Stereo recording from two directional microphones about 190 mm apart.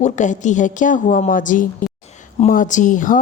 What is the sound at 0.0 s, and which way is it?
Speech, 40° left (ahead or behind).